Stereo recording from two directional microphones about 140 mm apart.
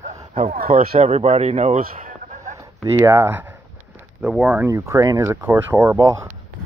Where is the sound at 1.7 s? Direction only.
70° right (ahead or behind).